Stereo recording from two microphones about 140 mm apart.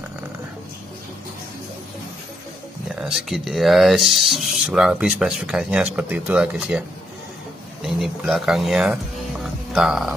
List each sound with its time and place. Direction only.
3.0 s speech: 5° right (ahead or behind)
7.8 s speech: centre (ahead or behind)
9.4 s music: 5° right (ahead or behind)